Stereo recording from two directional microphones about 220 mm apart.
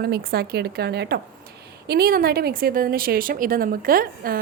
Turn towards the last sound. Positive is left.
turn(degrees=-40)  # may be behind; listen again after turning